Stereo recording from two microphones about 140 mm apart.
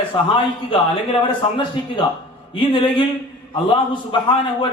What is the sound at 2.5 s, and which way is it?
A man's voice, 35° left (ahead or behind).